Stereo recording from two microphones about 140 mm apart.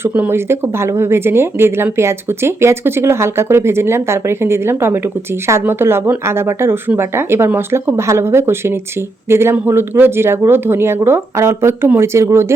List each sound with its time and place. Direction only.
0.0 s speech: 15° right (ahead or behind)